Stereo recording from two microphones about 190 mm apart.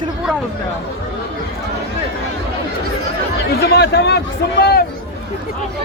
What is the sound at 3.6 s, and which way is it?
Speech, 60° left (ahead or behind).